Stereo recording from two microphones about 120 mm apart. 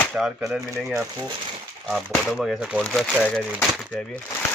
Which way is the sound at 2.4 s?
5° right (ahead or behind).